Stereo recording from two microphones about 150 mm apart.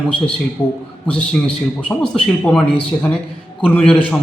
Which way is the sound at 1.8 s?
5° left (ahead or behind).